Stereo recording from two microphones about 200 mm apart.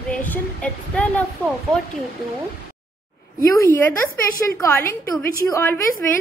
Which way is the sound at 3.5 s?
10° left (ahead or behind).